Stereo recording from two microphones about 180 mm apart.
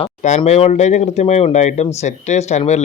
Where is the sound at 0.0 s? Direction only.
40° left (ahead or behind).